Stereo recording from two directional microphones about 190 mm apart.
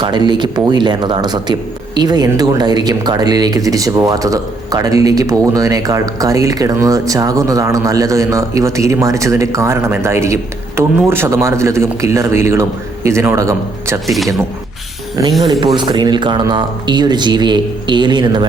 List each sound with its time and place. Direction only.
0.0 s speech: 25° right (ahead or behind)
15.2 s speech: 15° right (ahead or behind)